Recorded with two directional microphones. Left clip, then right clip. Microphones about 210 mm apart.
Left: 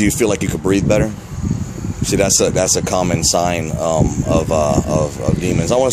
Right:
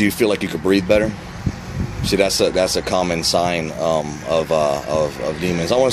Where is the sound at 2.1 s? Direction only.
15° left (ahead or behind).